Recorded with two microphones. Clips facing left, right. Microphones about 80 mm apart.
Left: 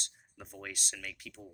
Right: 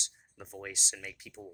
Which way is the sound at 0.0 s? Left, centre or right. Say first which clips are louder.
Right 1 dB; centre.